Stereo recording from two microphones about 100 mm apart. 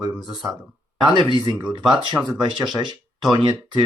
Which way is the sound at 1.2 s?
55° right (ahead or behind).